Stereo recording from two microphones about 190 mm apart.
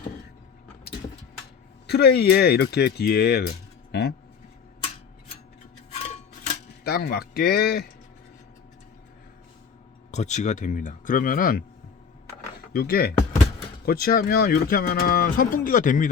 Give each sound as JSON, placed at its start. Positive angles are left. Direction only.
{"t": 1.9, "sound": "speech", "side_deg": 60}
{"t": 5.9, "sound": "music", "side_deg": 35}
{"t": 6.8, "sound": "speech", "side_deg": 60}
{"t": 10.1, "sound": "speech", "side_deg": 40}
{"t": 12.7, "sound": "speech", "side_deg": 55}